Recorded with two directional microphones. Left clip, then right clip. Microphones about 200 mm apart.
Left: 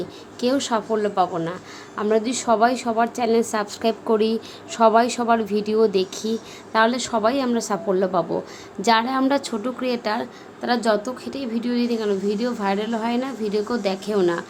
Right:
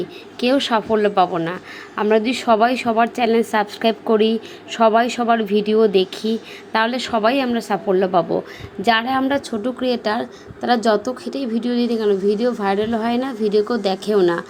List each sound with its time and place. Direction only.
0.3 s a woman's voice: 5° right (ahead or behind)
9.8 s a woman's voice: 10° right (ahead or behind)